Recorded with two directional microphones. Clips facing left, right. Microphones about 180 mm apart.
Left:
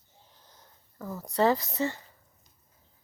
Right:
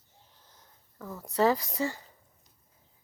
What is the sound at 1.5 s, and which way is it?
Speech, 10° right (ahead or behind).